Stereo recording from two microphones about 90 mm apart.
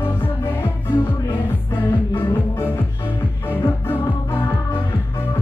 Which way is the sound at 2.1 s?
25° left (ahead or behind).